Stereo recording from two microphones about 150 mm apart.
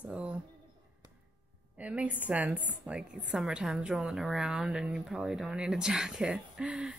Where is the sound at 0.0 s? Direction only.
10° right (ahead or behind).